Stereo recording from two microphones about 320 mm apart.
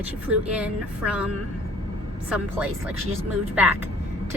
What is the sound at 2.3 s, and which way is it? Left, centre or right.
A woman's voice, centre.